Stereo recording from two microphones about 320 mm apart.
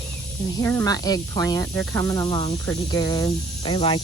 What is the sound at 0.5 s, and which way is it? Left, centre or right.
Speech, centre.